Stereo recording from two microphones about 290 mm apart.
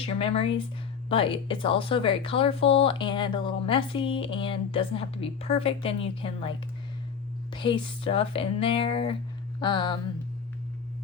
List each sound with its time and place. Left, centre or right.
0.0 s a woman's voice: centre
7.5 s a woman's voice: centre